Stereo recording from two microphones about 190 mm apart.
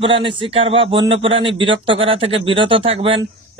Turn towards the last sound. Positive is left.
turn(degrees=-30)  # may be behind; listen again after turning